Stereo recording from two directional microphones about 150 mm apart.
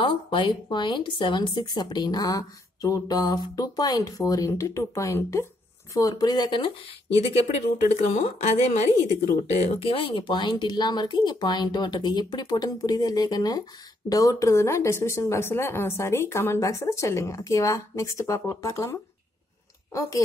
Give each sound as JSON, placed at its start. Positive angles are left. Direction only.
{"t": 0.0, "sound": "speech", "side_deg": 35}
{"t": 7.9, "sound": "speech", "side_deg": 50}